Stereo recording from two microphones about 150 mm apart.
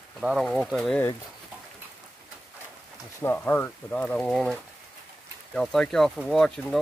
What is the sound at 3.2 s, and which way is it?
Speech, 15° left (ahead or behind).